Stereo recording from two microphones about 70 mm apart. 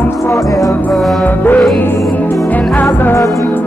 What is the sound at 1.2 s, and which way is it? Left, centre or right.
Music, left.